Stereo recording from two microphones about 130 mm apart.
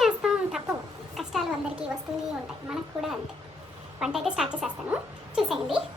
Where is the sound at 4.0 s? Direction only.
Centre (ahead or behind).